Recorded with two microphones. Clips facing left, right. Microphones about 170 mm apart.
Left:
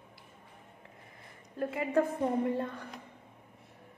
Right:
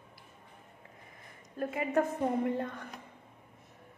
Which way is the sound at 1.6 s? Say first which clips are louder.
Left 1 dB; 30° left (ahead or behind).